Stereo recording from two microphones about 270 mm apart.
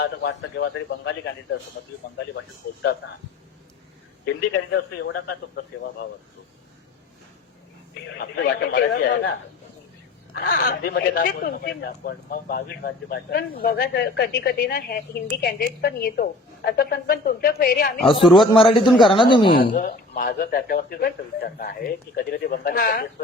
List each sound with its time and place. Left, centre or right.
0.0 s speech: left
4.7 s speech: left
8.2 s speech: left
10.3 s speech: left
18.2 s a man's voice: centre
18.5 s a man's voice: centre
19.6 s speech: left